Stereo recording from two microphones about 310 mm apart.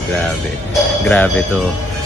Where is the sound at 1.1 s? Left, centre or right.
Centre.